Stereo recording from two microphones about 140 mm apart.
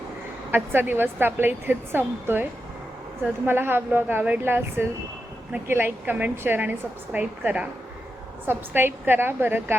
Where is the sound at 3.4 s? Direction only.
15° right (ahead or behind).